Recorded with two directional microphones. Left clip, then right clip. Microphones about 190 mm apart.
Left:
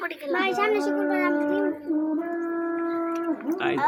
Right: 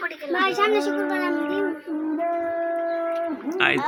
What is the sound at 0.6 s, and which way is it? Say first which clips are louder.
Speech: right 4 dB; 45° right (ahead or behind).